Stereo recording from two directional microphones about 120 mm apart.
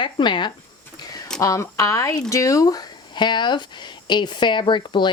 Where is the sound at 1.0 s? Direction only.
35° left (ahead or behind).